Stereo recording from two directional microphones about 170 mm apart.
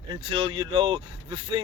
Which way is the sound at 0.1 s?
30° right (ahead or behind).